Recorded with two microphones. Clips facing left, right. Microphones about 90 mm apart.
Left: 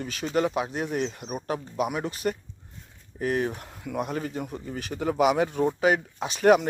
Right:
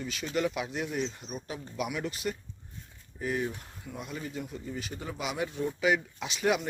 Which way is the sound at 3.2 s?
65° left (ahead or behind).